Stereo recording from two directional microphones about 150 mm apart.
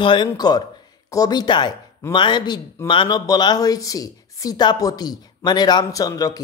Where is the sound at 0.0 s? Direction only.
35° left (ahead or behind).